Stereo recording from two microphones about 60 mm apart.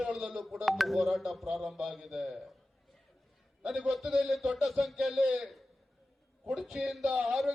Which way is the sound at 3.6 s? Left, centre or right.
Centre.